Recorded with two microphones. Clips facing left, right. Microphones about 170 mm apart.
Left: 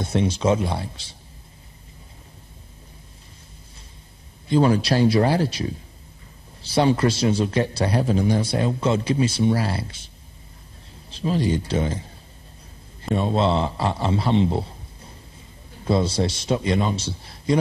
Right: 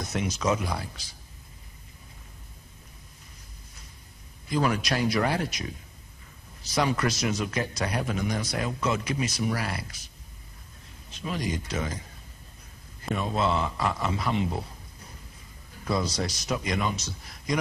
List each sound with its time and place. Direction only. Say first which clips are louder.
0.0 s a man's voice: left 7 dB; 30° left (ahead or behind)
4.5 s a man's voice: left 8 dB; 30° left (ahead or behind)
13.1 s a man's voice: left 6 dB; 30° left (ahead or behind)